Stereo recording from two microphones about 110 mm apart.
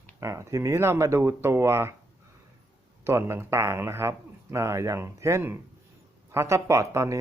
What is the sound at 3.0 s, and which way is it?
Speech, 25° right (ahead or behind).